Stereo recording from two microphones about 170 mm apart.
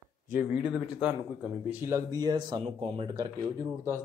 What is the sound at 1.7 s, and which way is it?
Speech, 15° right (ahead or behind).